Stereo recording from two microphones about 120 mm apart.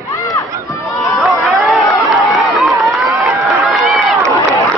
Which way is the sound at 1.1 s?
Centre (ahead or behind).